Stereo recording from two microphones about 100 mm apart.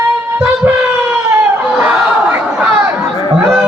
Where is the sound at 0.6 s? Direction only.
20° right (ahead or behind).